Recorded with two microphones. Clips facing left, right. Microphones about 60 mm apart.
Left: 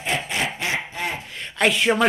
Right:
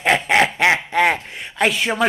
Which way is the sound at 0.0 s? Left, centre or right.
Right.